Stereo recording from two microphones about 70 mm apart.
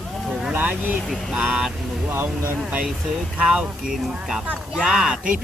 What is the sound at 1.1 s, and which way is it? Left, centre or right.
Speech, centre.